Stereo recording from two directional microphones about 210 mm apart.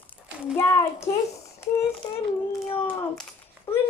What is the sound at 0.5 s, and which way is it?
Speech, 15° left (ahead or behind).